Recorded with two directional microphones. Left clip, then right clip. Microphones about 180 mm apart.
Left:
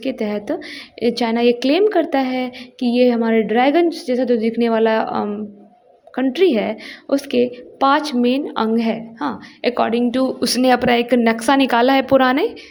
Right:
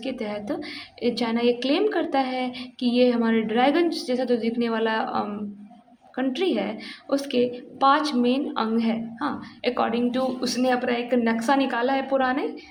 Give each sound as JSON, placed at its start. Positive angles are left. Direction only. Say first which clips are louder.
{"t": 0.0, "sound": "a woman's voice", "louder": "left 7 dB", "side_deg": 35}